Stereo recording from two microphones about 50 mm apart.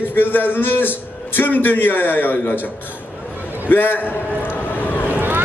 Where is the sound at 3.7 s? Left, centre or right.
Left.